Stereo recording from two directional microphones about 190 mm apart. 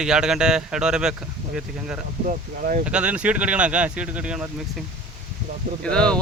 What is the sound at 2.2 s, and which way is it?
Speech, 45° right (ahead or behind).